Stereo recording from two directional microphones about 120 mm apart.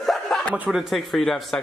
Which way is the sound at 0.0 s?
Centre (ahead or behind).